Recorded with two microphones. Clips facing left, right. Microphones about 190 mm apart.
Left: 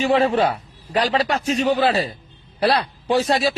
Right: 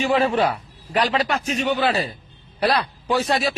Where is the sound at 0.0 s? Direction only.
35° left (ahead or behind).